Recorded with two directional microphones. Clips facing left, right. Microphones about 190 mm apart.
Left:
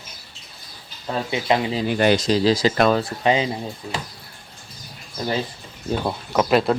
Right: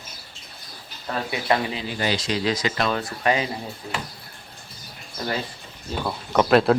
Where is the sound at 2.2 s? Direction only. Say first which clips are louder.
Left 6 dB; 35° left (ahead or behind).